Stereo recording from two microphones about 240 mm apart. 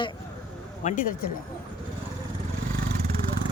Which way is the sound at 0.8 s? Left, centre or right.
Left.